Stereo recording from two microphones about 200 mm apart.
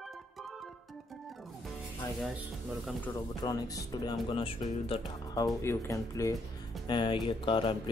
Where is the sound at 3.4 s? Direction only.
20° left (ahead or behind).